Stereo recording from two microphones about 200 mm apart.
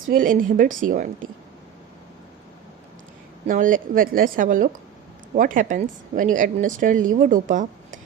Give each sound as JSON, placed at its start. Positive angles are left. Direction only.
{"t": 0.1, "sound": "a woman's voice", "side_deg": -45}
{"t": 3.4, "sound": "a woman's voice", "side_deg": -40}